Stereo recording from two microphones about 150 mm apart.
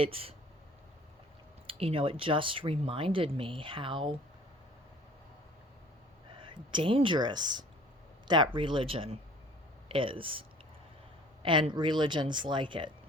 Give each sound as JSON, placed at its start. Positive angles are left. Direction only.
{"t": 0.0, "sound": "speech", "side_deg": -40}
{"t": 1.6, "sound": "speech", "side_deg": -35}
{"t": 6.4, "sound": "speech", "side_deg": -30}
{"t": 11.4, "sound": "speech", "side_deg": -35}